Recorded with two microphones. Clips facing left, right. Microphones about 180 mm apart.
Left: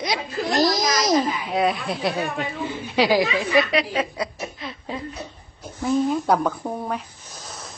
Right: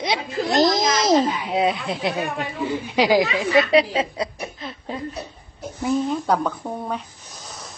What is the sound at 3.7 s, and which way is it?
Speech, 30° right (ahead or behind).